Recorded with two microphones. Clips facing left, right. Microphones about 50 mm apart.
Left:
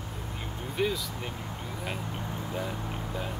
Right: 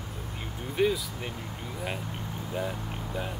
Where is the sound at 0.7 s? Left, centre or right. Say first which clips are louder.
Right 4 dB; centre.